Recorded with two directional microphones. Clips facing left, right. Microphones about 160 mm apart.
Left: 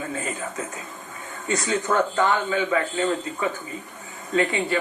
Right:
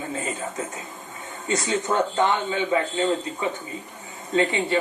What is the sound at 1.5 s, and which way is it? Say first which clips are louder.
A man's voice: even; 20° right (ahead or behind).